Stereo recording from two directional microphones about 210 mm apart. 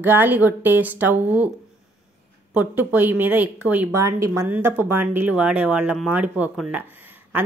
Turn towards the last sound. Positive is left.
turn(degrees=-10)  # may be behind; listen again after turning